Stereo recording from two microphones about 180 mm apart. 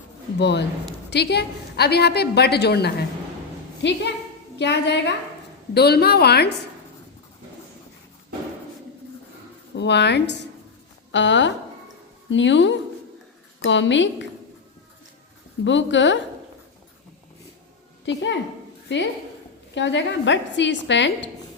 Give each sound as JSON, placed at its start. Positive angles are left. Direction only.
{"t": 0.3, "sound": "a woman's voice", "side_deg": 70}
{"t": 3.8, "sound": "a woman's voice", "side_deg": 80}
{"t": 9.7, "sound": "a woman's voice", "side_deg": 70}
{"t": 11.1, "sound": "a woman's voice", "side_deg": 90}
{"t": 15.6, "sound": "a woman's voice", "side_deg": 90}
{"t": 18.0, "sound": "a woman's voice", "side_deg": 90}